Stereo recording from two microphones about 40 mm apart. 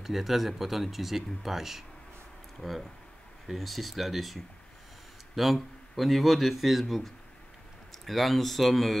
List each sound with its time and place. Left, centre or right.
0.0 s speech: centre